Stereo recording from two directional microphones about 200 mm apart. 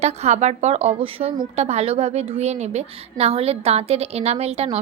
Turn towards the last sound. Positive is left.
turn(degrees=-30)  # may be behind; listen again after turning